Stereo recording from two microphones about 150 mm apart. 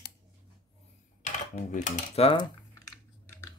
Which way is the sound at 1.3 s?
55° left (ahead or behind).